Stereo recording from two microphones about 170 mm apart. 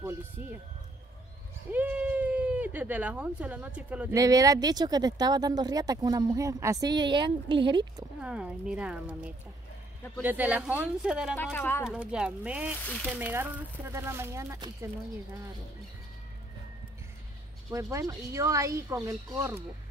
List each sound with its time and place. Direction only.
1.7 s speech: 10° right (ahead or behind)
4.1 s speech: 20° right (ahead or behind)
8.2 s speech: 5° right (ahead or behind)
11.5 s speech: 10° left (ahead or behind)
11.8 s speech: 5° right (ahead or behind)
12.8 s speech: 5° left (ahead or behind)
13.1 s speech: 10° right (ahead or behind)
17.6 s speech: 20° right (ahead or behind)